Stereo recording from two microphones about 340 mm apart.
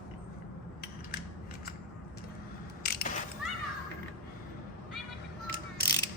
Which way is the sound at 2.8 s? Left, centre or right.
Left.